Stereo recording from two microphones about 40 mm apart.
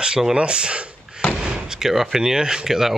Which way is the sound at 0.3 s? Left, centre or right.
Right.